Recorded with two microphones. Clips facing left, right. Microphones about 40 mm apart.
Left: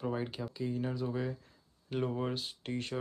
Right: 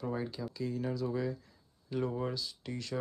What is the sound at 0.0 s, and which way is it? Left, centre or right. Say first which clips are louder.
Speech: left 1 dB; left.